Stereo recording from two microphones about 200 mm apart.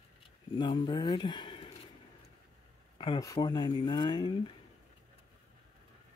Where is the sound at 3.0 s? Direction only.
20° left (ahead or behind).